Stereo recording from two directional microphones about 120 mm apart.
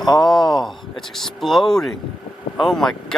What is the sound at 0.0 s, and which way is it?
Speech, 35° left (ahead or behind).